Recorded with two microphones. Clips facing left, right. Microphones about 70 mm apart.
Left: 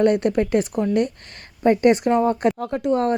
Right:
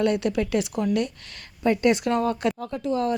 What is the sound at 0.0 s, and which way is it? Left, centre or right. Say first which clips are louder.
Speech: left 5 dB; left.